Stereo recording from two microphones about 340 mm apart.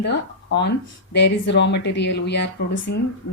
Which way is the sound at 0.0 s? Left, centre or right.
Left.